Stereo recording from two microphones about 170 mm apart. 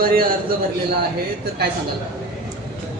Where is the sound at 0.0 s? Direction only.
60° right (ahead or behind).